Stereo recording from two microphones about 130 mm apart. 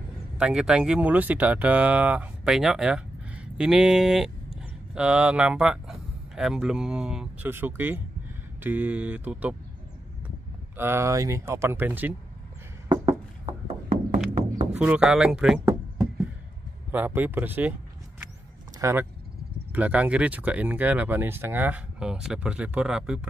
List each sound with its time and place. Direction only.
0.4 s speech: 5° right (ahead or behind)
7.4 s speech: 15° right (ahead or behind)
10.8 s speech: 20° right (ahead or behind)
12.8 s a sound: 35° right (ahead or behind)
13.5 s a sound: 55° right (ahead or behind)
14.8 s speech: 10° right (ahead or behind)
16.9 s speech: 15° right (ahead or behind)
18.8 s speech: 20° right (ahead or behind)